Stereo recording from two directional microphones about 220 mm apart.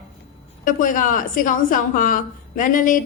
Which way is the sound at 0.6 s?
35° left (ahead or behind).